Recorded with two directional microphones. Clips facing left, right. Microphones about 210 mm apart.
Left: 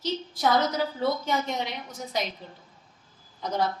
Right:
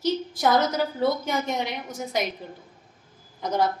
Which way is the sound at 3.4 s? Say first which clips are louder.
Right 3 dB; 50° right (ahead or behind).